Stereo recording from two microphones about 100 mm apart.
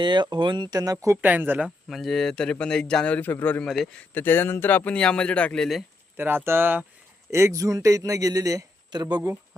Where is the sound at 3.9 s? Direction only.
20° left (ahead or behind); by 5.8 s 5° left (ahead or behind).